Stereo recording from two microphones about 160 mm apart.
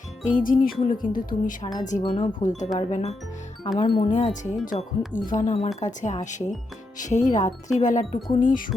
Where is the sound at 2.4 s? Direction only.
50° left (ahead or behind).